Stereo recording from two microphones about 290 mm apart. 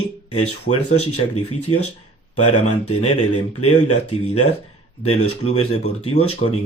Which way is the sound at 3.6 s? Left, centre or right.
Left.